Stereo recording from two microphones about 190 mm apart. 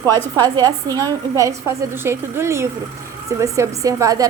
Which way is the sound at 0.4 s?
20° right (ahead or behind).